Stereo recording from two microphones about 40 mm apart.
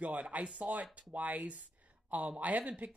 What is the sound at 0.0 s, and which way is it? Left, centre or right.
Speech, right.